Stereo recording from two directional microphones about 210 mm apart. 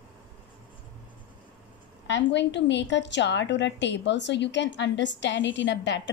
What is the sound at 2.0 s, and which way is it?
A woman's voice, 55° left (ahead or behind).